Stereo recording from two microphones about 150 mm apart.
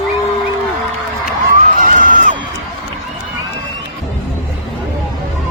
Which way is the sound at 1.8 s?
60° right (ahead or behind).